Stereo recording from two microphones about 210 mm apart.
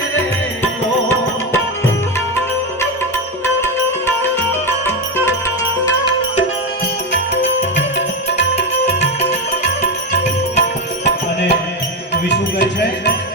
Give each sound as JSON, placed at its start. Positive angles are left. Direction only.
{"t": 3.4, "sound": "sitar", "side_deg": 10}
{"t": 7.8, "sound": "music", "side_deg": 60}
{"t": 9.6, "sound": "music", "side_deg": 55}